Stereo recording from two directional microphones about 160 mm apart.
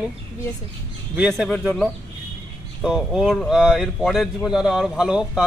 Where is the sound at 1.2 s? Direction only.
Centre (ahead or behind).